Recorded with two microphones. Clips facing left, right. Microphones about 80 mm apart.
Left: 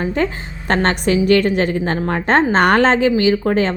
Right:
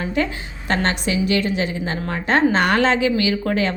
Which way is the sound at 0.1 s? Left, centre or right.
Left.